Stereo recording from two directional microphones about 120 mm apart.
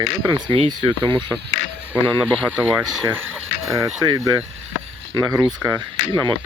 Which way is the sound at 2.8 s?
Centre (ahead or behind).